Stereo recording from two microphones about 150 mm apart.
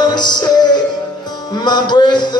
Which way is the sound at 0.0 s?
30° left (ahead or behind).